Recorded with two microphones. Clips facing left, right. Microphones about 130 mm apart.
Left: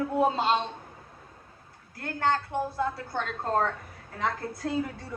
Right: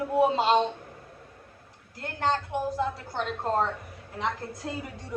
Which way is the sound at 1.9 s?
20° right (ahead or behind).